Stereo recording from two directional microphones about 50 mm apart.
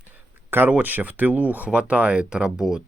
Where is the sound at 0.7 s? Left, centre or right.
Right.